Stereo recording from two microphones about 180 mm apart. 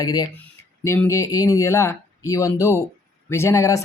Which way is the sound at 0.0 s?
20° left (ahead or behind).